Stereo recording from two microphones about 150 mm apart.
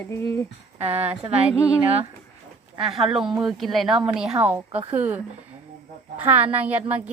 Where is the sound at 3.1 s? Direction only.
30° right (ahead or behind).